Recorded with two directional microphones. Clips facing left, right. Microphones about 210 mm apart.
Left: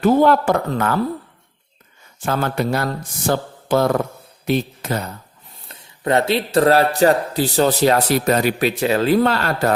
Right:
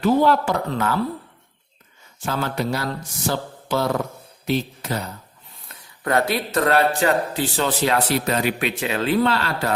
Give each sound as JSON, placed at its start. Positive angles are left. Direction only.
{"t": 0.0, "sound": "speech", "side_deg": 50}
{"t": 2.2, "sound": "speech", "side_deg": 55}
{"t": 5.6, "sound": "speech", "side_deg": 25}